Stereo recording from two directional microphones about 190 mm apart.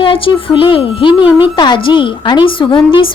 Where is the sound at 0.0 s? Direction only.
25° left (ahead or behind).